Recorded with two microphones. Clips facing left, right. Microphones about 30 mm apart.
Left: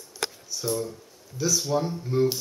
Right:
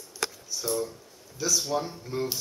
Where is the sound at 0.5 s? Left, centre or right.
Centre.